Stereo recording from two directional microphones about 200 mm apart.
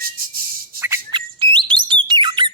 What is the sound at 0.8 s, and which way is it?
Bird, 20° right (ahead or behind).